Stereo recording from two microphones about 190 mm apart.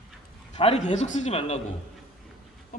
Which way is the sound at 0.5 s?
35° left (ahead or behind).